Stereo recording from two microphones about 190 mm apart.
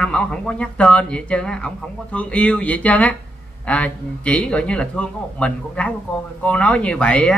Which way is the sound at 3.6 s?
5° left (ahead or behind).